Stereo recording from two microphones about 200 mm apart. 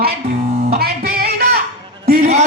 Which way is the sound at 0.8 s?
50° right (ahead or behind).